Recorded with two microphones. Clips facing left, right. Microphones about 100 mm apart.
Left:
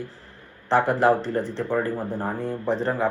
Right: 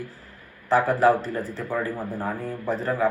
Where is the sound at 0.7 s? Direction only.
25° left (ahead or behind).